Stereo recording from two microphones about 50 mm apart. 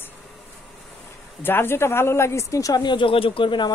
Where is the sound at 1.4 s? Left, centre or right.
Left.